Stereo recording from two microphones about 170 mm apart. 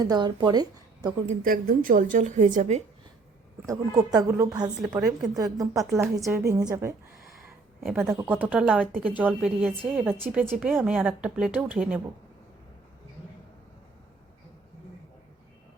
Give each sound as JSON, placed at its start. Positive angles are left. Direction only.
{"t": 0.0, "sound": "speech", "side_deg": -25}
{"t": 1.3, "sound": "a woman's voice", "side_deg": -55}
{"t": 3.7, "sound": "a woman's voice", "side_deg": -20}
{"t": 4.9, "sound": "a woman's voice", "side_deg": 0}
{"t": 5.4, "sound": "a woman's voice", "side_deg": -20}
{"t": 7.3, "sound": "a sound", "side_deg": 0}
{"t": 7.9, "sound": "speech", "side_deg": -15}